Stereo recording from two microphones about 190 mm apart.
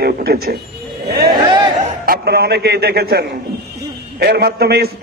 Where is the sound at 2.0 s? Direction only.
55° right (ahead or behind).